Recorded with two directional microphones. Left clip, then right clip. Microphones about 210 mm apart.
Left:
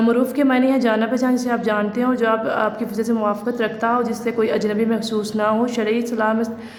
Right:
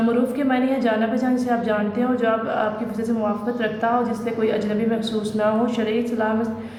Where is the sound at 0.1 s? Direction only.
40° left (ahead or behind).